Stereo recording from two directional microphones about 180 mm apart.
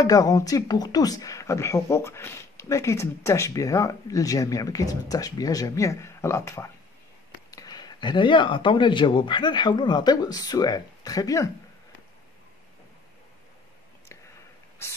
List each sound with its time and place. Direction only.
0.0 s speech: 20° left (ahead or behind)